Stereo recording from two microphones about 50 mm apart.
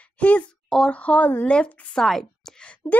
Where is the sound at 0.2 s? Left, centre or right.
Left.